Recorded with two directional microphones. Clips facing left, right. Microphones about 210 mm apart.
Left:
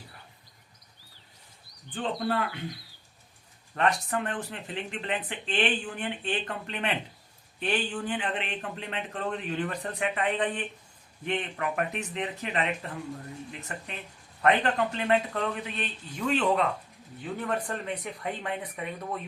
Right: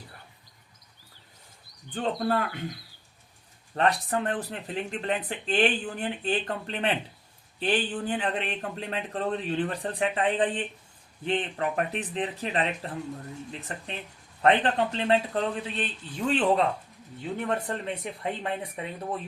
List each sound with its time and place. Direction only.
1.9 s speech: 45° right (ahead or behind)
3.8 s speech: 35° right (ahead or behind)